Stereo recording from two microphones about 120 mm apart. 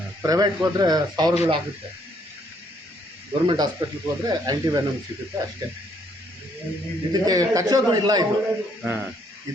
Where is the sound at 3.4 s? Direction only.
35° right (ahead or behind).